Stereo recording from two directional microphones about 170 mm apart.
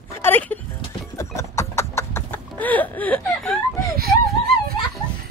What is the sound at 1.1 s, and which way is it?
Horse, 15° left (ahead or behind).